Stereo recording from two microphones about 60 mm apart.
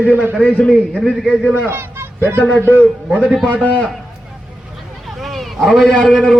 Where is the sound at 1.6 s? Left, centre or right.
Right.